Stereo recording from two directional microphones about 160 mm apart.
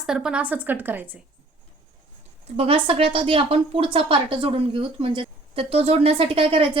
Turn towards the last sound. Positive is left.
turn(degrees=-35)  # may be behind; listen again after turning